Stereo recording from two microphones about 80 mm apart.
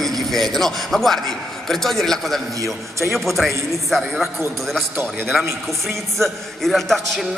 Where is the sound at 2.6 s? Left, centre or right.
Right.